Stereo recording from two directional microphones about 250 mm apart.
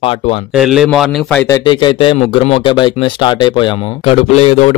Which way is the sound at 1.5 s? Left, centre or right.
Centre.